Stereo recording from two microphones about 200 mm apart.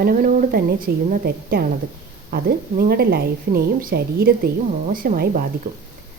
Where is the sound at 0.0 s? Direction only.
45° right (ahead or behind).